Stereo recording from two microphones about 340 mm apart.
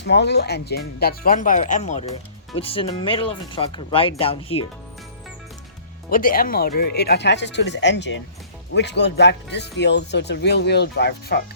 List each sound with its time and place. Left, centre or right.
0.0 s speech: left
6.1 s speech: left